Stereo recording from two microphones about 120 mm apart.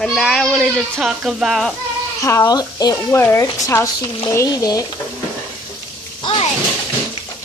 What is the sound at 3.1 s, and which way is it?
Speech, 20° left (ahead or behind).